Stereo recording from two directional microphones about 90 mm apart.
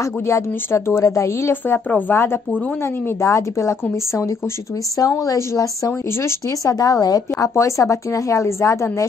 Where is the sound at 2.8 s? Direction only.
25° left (ahead or behind).